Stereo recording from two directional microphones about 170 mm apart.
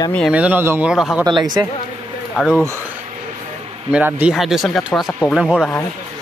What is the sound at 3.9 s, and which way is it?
Speech, 10° right (ahead or behind).